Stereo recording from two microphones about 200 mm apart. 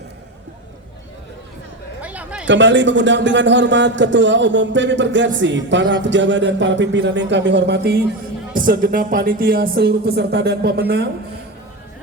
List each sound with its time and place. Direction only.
2.0 s a sound: 5° right (ahead or behind)
2.5 s speech: 65° right (ahead or behind)
8.5 s speech: 45° right (ahead or behind)